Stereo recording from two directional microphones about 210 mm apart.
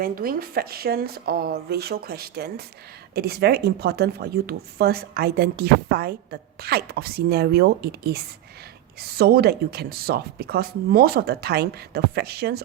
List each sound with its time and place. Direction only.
0.0 s speech: 45° right (ahead or behind)